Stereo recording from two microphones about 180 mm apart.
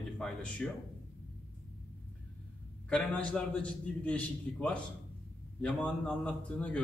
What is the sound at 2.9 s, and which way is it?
A man's voice, 5° left (ahead or behind).